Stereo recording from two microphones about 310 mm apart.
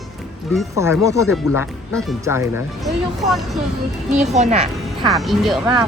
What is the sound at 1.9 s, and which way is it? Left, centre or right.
Speech, centre.